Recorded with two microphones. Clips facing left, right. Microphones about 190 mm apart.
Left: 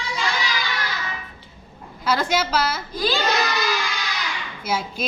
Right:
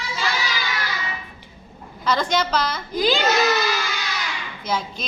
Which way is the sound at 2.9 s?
15° right (ahead or behind).